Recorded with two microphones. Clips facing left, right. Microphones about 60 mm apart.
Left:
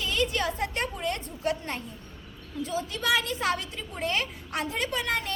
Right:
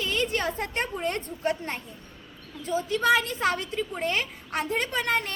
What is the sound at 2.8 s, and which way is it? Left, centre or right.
A woman's voice, right.